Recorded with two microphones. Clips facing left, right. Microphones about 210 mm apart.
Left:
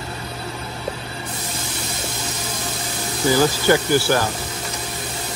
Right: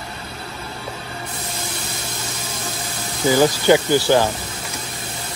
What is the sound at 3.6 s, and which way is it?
Speech, 20° right (ahead or behind).